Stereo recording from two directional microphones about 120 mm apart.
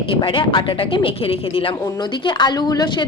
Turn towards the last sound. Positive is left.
turn(degrees=35)  # may be behind; listen again after turning